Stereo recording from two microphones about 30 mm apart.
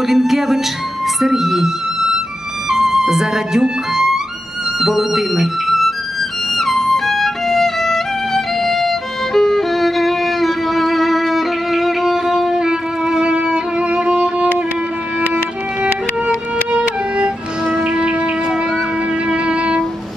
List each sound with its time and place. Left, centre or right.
0.0 s speech: centre
2.7 s speech: centre
6.5 s violin: centre
11.3 s music: centre
12.5 s violin: right
17.8 s shofar: right
19.2 s music: right